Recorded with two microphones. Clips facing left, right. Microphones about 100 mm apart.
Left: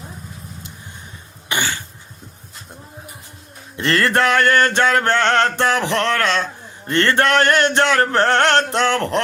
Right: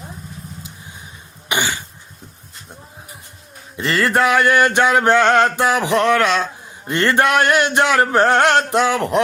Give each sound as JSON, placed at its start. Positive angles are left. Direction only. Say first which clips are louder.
{"t": 1.5, "sound": "cough", "louder": "right 2 dB", "side_deg": -15}
{"t": 3.8, "sound": "mantra", "louder": "even", "side_deg": 0}